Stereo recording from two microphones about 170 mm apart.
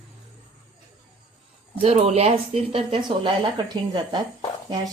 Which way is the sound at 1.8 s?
35° right (ahead or behind).